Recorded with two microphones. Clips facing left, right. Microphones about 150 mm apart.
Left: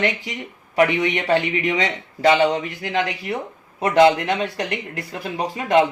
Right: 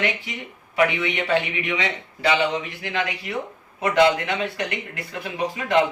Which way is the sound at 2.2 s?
40° left (ahead or behind).